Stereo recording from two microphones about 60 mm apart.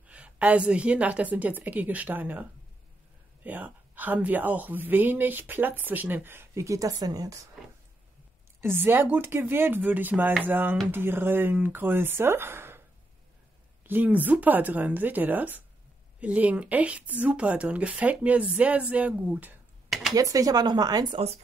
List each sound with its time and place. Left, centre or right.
0.0 s a woman's voice: right
3.4 s speech: right
6.5 s speech: right
8.5 s speech: right
13.8 s a woman's voice: right
19.9 s a sound: centre
20.2 s speech: right